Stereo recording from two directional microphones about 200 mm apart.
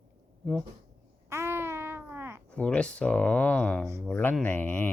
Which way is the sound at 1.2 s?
15° right (ahead or behind).